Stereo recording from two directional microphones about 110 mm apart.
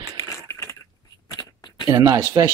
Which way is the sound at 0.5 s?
25° left (ahead or behind).